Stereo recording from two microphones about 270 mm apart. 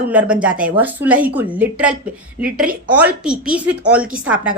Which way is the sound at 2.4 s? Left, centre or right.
Right.